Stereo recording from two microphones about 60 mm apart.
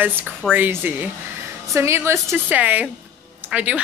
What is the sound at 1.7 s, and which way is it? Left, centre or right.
Speech, right.